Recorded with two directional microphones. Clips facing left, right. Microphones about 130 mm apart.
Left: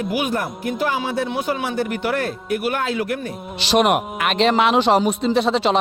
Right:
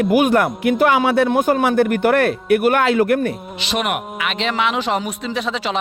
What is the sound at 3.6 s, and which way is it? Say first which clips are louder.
Speech: left 6 dB; 35° left (ahead or behind).